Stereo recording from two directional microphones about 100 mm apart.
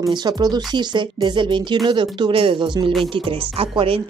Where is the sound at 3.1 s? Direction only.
65° right (ahead or behind).